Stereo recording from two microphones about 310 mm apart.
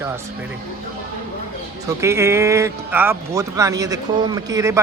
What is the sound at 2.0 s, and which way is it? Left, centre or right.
A man's voice, centre.